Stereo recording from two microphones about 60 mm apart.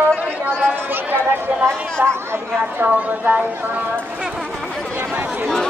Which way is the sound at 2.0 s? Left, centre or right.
Right.